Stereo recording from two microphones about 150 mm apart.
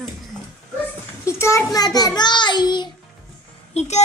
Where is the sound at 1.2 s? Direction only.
20° left (ahead or behind).